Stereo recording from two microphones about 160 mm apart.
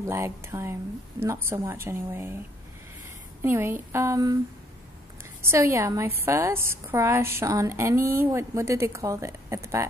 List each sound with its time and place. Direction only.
0.0 s a woman's voice: 15° right (ahead or behind)
3.4 s a woman's voice: 15° right (ahead or behind)
5.4 s a woman's voice: 15° right (ahead or behind)